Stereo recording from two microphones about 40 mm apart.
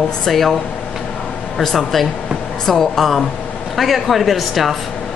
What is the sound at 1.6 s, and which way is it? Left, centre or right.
A woman's voice, centre.